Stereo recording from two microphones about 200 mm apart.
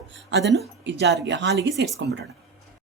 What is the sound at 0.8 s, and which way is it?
Speech, 60° right (ahead or behind).